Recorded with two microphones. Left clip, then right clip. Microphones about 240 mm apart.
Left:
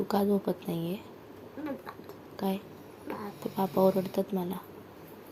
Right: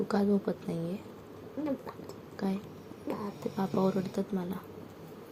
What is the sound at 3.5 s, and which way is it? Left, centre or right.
Speech, left.